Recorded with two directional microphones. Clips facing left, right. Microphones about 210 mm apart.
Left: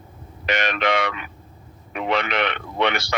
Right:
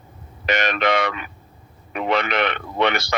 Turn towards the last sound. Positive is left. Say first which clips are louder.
# right 2 dB
turn(degrees=-45)  # may be behind; listen again after turning